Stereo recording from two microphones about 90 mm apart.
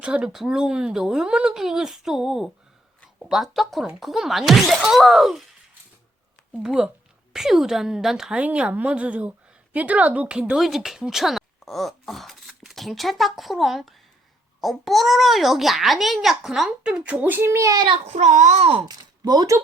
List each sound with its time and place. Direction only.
0.0 s a child's voice: 10° right (ahead or behind)
6.5 s a child's voice: 5° right (ahead or behind); by 17.7 s 25° right (ahead or behind)
18.9 s speech: 50° right (ahead or behind)